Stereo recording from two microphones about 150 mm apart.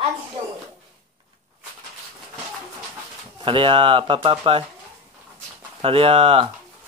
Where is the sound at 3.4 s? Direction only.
35° right (ahead or behind).